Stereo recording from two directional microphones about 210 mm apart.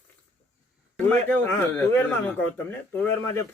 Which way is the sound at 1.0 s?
10° left (ahead or behind).